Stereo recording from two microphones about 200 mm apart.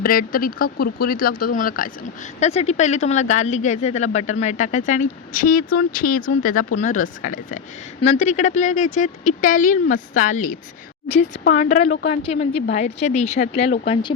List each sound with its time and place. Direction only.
0.0 s speech: 45° left (ahead or behind)
2.4 s speech: 35° left (ahead or behind)